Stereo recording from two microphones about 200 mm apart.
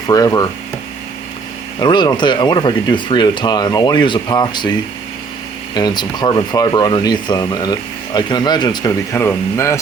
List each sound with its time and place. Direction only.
0.1 s speech: 20° left (ahead or behind)
1.8 s speech: 20° left (ahead or behind)
5.7 s speech: 20° left (ahead or behind)